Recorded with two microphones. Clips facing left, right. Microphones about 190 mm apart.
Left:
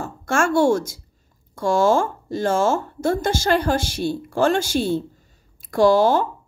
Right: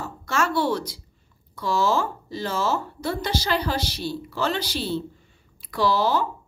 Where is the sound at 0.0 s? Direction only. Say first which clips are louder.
Left 4 dB; 50° left (ahead or behind).